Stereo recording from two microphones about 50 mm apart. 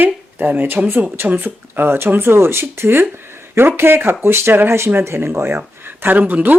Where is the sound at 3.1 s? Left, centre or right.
Right.